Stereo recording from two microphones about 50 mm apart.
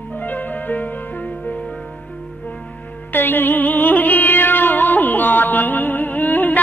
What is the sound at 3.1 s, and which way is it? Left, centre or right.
Music, left.